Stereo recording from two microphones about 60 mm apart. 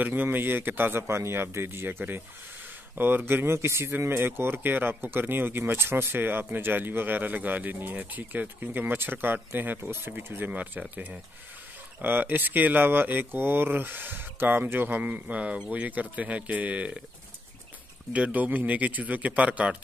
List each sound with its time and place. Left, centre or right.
0.0 s speech: right
10.5 s speech: right
12.0 s speech: right
18.1 s speech: right